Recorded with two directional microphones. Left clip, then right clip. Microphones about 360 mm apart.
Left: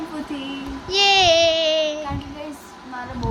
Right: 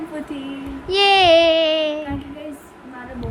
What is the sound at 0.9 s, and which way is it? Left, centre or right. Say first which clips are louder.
Music: right 2 dB; centre.